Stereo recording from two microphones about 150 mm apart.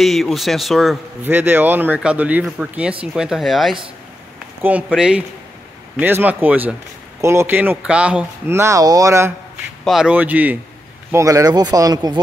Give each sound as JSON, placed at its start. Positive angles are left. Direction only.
{"t": 0.0, "sound": "speech", "side_deg": 0}
{"t": 1.2, "sound": "speech", "side_deg": -15}
{"t": 9.8, "sound": "speech", "side_deg": -5}